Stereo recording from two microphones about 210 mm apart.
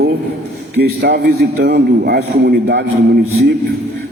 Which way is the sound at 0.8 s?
50° right (ahead or behind).